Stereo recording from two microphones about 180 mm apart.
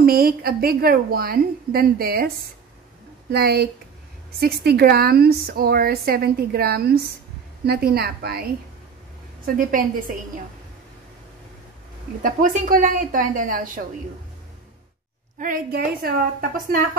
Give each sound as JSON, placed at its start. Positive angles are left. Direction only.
{"t": 0.0, "sound": "a woman's voice", "side_deg": -55}
{"t": 9.6, "sound": "a woman's voice", "side_deg": -50}
{"t": 12.2, "sound": "a woman's voice", "side_deg": -50}
{"t": 15.3, "sound": "a woman's voice", "side_deg": -50}